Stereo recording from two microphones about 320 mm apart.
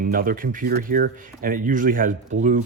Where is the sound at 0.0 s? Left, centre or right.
Right.